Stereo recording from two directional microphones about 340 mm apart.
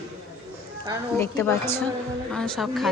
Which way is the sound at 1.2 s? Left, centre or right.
Centre.